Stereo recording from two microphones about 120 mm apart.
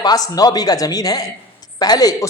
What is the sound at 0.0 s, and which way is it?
A man's voice, 30° left (ahead or behind).